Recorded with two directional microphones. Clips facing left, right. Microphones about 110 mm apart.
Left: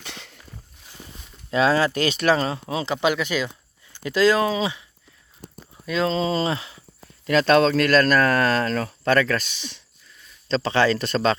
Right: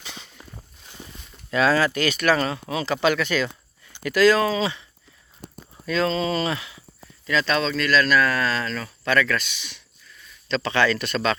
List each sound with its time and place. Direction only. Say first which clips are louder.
0.0 s a sound: left 1 dB; 75° left (ahead or behind)
1.5 s speech: left 1 dB; 25° left (ahead or behind)
7.3 s speech: left 6 dB; 50° left (ahead or behind)
9.1 s speech: even; 35° left (ahead or behind)